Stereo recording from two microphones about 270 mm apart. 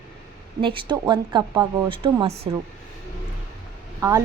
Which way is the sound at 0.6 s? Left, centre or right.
Centre.